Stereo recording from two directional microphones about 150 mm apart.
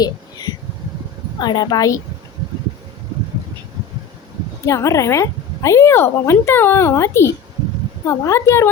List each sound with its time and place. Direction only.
1.4 s speech: 30° left (ahead or behind)
4.6 s speech: 20° left (ahead or behind)